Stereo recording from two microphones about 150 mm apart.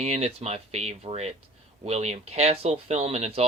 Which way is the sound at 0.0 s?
45° right (ahead or behind).